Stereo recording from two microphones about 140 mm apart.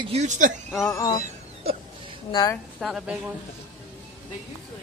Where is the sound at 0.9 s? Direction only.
25° left (ahead or behind).